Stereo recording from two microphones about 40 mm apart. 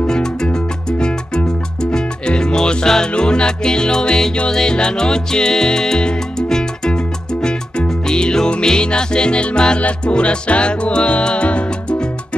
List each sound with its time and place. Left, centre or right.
0.1 s music: centre
8.1 s music: centre